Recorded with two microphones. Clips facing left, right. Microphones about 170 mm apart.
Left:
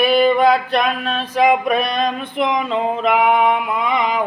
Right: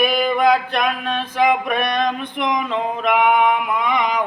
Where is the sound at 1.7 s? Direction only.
25° left (ahead or behind).